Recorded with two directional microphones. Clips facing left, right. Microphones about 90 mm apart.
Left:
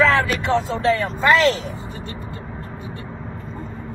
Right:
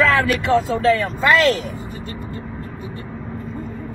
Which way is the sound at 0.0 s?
30° left (ahead or behind).